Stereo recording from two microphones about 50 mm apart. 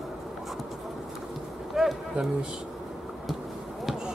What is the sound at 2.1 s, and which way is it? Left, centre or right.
Speech, centre.